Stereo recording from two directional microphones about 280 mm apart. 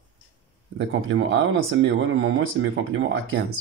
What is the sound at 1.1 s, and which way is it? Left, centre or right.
Speech, right.